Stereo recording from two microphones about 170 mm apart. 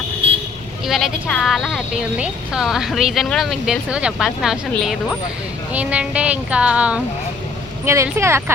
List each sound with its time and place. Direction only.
0.9 s a woman's voice: centre (ahead or behind)